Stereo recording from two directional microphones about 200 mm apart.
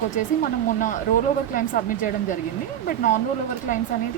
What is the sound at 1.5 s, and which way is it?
A woman's voice, 40° left (ahead or behind).